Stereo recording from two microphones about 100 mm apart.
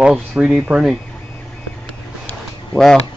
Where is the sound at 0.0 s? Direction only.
10° right (ahead or behind).